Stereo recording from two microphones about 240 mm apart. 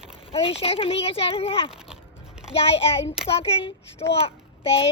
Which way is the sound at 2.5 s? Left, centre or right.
Left.